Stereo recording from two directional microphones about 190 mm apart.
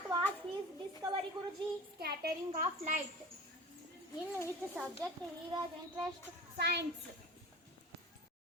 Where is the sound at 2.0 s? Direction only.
50° right (ahead or behind).